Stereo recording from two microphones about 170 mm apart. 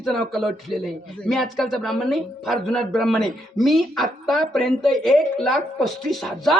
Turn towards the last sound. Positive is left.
turn(degrees=0)  # may be behind; listen again after turning